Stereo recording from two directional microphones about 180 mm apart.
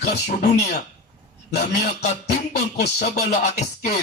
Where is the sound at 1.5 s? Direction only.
55° left (ahead or behind).